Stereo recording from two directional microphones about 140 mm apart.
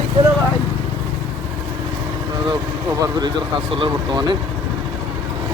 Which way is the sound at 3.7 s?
35° right (ahead or behind).